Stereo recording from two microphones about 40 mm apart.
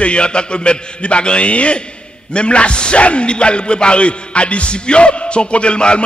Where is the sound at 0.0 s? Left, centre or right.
Left.